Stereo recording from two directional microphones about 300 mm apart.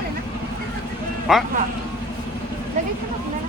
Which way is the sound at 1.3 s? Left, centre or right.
Centre.